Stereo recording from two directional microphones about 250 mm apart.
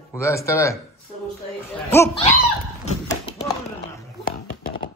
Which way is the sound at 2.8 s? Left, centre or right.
Left.